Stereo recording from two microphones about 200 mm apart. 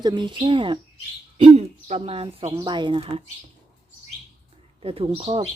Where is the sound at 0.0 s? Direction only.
20° right (ahead or behind).